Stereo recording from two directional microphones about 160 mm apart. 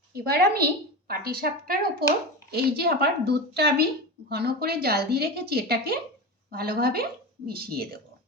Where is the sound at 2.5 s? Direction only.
80° right.